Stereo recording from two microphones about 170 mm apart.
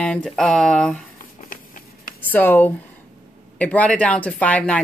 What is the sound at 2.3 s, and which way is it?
A woman's voice, 10° left (ahead or behind).